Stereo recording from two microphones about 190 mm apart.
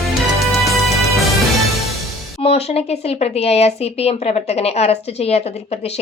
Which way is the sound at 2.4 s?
30° left (ahead or behind).